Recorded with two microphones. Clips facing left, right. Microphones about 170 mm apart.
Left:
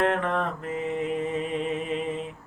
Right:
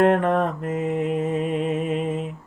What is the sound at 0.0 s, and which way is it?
Mantra, 45° right (ahead or behind).